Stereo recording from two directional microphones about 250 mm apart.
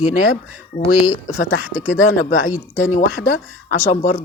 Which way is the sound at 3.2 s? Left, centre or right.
Left.